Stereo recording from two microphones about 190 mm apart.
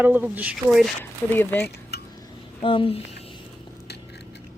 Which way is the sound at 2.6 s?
25° left (ahead or behind).